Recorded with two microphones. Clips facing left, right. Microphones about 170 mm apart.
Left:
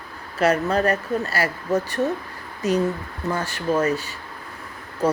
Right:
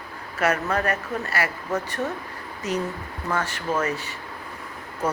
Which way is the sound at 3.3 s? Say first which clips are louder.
Left 3 dB; 35° left (ahead or behind).